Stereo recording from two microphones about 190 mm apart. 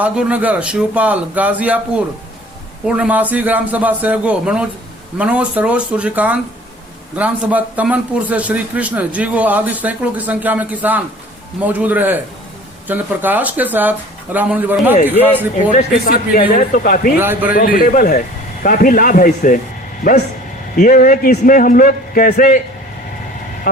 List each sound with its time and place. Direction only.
0.0 s speech: 5° right (ahead or behind)
2.8 s speech: 5° right (ahead or behind)
15.7 s a man's voice: 40° left (ahead or behind)
17.2 s speech: 10° right (ahead or behind)
17.5 s a man's voice: 50° left (ahead or behind)
20.7 s a man's voice: 45° left (ahead or behind)